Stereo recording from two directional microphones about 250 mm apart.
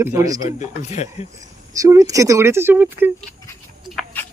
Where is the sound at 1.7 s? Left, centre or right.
Centre.